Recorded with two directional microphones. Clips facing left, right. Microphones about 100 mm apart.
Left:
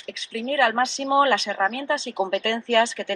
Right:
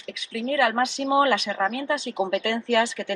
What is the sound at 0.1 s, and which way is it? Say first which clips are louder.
A woman's voice: even; 30° left (ahead or behind).